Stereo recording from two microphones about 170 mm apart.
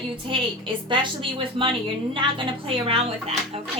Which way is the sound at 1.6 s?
30° right (ahead or behind).